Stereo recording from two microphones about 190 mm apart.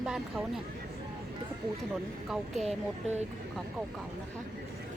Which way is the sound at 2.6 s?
35° right (ahead or behind).